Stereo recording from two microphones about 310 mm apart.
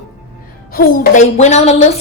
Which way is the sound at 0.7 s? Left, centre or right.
Left.